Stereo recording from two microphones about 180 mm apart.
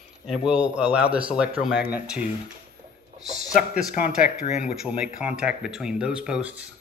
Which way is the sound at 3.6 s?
5° right (ahead or behind).